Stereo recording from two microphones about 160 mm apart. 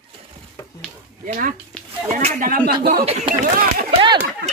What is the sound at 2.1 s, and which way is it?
Speech, 60° right (ahead or behind).